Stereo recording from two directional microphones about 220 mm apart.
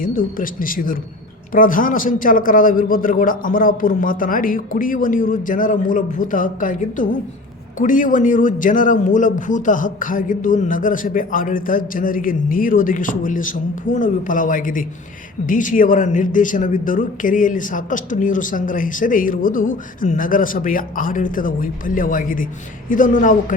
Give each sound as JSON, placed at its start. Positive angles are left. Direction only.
{"t": 0.0, "sound": "a man's voice", "side_deg": 40}